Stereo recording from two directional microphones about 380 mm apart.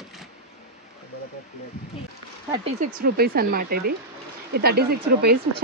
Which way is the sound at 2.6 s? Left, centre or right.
Right.